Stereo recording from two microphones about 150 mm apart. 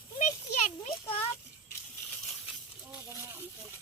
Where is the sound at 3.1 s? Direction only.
15° right (ahead or behind).